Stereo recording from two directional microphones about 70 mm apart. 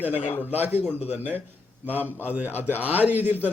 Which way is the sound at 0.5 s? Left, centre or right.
Right.